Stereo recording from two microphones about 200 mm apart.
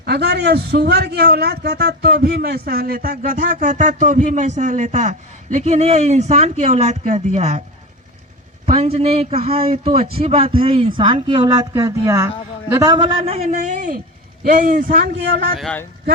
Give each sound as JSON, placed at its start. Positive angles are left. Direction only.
{"t": 0.0, "sound": "a man's voice", "side_deg": -55}
{"t": 8.6, "sound": "a man's voice", "side_deg": -30}
{"t": 13.5, "sound": "a man's voice", "side_deg": -40}
{"t": 15.5, "sound": "speech", "side_deg": 5}